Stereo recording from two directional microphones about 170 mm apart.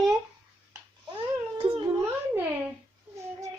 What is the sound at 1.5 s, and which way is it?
Cat, 30° right (ahead or behind).